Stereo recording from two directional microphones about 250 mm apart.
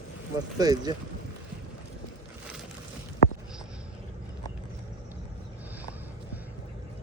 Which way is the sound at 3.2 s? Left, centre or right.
Left.